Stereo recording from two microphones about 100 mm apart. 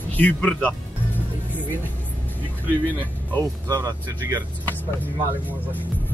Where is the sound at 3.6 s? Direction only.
35° right (ahead or behind).